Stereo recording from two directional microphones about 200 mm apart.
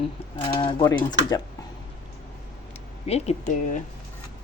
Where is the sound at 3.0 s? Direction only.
30° left (ahead or behind).